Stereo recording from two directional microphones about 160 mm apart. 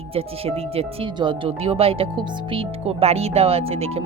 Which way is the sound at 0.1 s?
40° right (ahead or behind).